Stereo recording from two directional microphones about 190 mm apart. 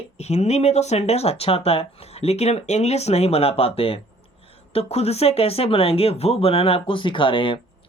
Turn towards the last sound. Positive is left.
turn(degrees=25)  # may be behind; listen again after turning